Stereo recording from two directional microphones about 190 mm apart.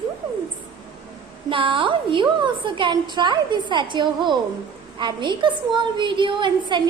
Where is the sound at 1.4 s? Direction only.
25° right (ahead or behind).